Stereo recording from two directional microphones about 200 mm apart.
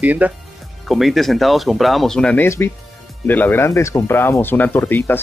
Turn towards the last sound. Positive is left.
turn(degrees=10)  # may be behind; listen again after turning